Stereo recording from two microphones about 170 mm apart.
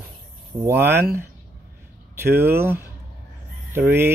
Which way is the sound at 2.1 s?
15° right (ahead or behind).